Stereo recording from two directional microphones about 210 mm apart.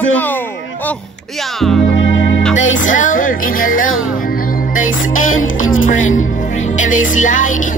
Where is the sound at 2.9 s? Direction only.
40° left (ahead or behind).